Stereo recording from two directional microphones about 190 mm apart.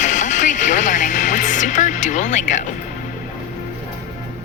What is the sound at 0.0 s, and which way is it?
Music, 40° left (ahead or behind).